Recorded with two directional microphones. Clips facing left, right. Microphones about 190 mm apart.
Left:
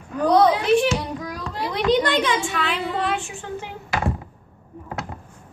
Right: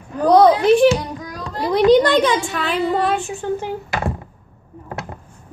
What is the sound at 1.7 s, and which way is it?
A woman's voice, 40° right (ahead or behind).